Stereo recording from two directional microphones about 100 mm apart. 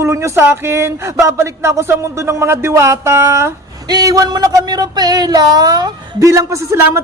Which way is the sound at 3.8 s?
40° right (ahead or behind).